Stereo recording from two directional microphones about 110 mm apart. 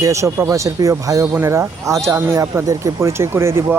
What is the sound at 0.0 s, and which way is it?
Speech, 25° right (ahead or behind).